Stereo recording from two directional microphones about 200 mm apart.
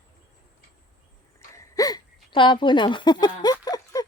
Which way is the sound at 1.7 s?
20° left (ahead or behind).